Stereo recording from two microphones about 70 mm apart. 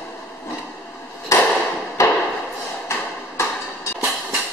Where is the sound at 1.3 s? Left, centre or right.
Left.